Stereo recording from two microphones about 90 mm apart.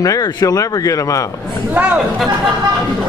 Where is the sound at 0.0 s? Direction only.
40° left (ahead or behind).